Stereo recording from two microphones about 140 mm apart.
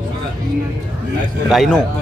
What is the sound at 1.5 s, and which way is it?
Speech, centre (ahead or behind).